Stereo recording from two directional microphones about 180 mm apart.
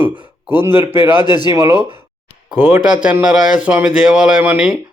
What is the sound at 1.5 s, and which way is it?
Speech, 15° right (ahead or behind).